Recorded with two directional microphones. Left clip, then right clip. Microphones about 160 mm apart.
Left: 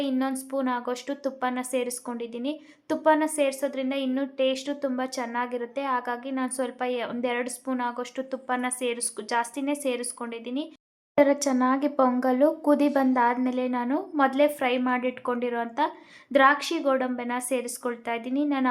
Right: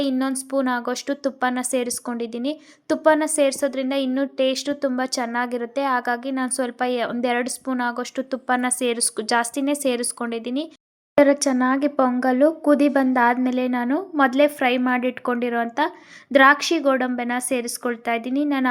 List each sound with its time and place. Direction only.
0.0 s a woman's voice: 30° right (ahead or behind)
11.2 s speech: 25° right (ahead or behind)